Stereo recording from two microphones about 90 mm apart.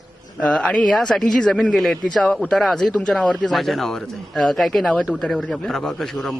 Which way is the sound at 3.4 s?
Centre (ahead or behind).